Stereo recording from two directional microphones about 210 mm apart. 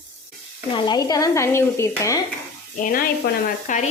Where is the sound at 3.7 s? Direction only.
35° left (ahead or behind).